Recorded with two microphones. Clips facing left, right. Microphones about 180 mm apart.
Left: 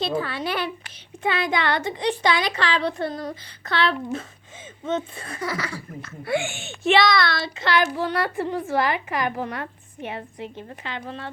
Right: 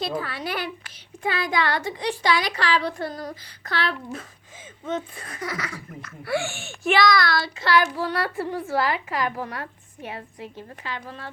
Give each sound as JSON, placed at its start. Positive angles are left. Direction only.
{"t": 0.0, "sound": "a woman's voice", "side_deg": 25}